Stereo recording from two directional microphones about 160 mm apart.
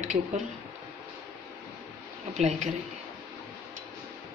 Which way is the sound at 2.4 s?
45° right (ahead or behind).